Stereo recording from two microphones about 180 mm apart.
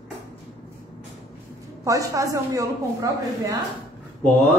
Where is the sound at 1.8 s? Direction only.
20° right (ahead or behind).